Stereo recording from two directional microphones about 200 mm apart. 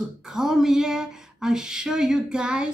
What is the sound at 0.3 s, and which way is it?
Speech, centre (ahead or behind).